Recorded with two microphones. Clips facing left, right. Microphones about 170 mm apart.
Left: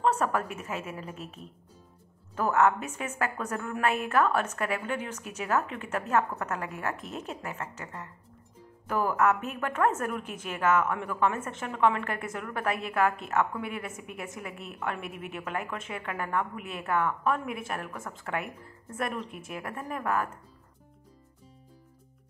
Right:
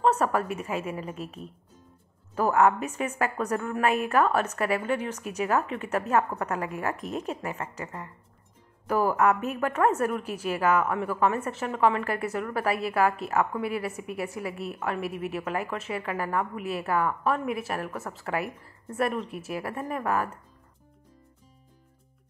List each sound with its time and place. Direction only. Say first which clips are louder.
0.0 s a woman's voice: right 3 dB; 5° right (ahead or behind)
7.0 s a woman's voice: right 6 dB; 40° right (ahead or behind)
7.4 s a woman's voice: right 4 dB; 10° right (ahead or behind)